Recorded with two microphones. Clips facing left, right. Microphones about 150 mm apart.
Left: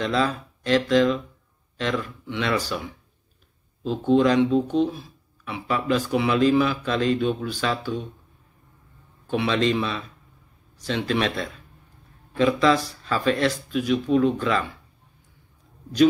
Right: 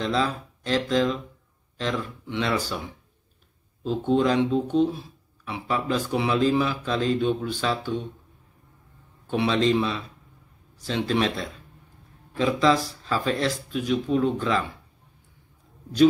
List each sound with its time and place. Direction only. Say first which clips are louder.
0.0 s speech: left 2 dB; 20° right (ahead or behind)
4.0 s speech: left 3 dB; 25° right (ahead or behind)
9.3 s speech: even; 25° right (ahead or behind)